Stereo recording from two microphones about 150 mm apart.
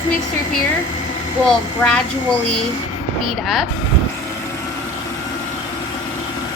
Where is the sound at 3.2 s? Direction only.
Centre (ahead or behind).